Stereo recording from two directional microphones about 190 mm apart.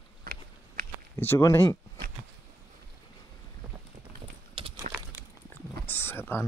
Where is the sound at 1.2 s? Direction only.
10° left (ahead or behind).